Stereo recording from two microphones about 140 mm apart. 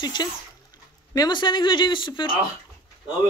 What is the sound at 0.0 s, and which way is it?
Speech, 30° left (ahead or behind).